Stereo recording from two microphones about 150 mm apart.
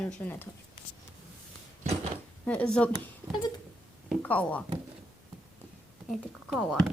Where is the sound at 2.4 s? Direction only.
5° left (ahead or behind).